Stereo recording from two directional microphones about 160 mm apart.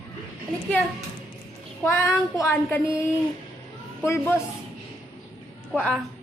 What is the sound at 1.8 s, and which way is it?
Speech, 15° left (ahead or behind).